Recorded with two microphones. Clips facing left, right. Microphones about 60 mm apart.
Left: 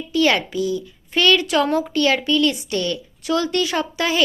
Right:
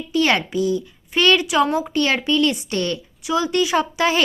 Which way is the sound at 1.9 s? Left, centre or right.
Right.